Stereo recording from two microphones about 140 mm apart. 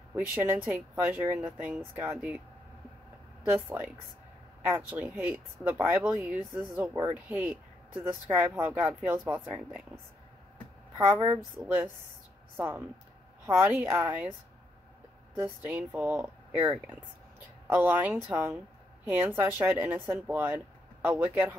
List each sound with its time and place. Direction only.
0.1 s speech: 15° right (ahead or behind)
3.4 s speech: 10° right (ahead or behind)
11.1 s speech: 15° right (ahead or behind)
15.6 s speech: 10° right (ahead or behind)